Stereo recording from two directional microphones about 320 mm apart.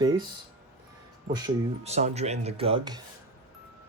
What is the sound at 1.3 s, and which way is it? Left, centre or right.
Speech, centre.